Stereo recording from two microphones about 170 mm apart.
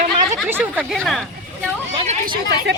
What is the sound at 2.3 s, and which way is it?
Speech, 90° right.